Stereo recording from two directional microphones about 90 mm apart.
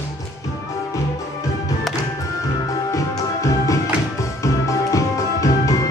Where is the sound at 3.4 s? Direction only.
35° left (ahead or behind).